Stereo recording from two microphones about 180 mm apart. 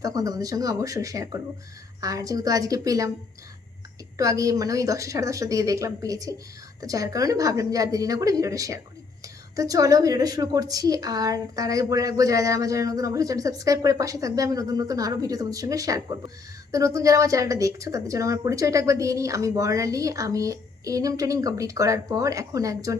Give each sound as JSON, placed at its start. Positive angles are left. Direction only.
{"t": 0.0, "sound": "a woman's voice", "side_deg": -20}
{"t": 4.2, "sound": "a woman's voice", "side_deg": -20}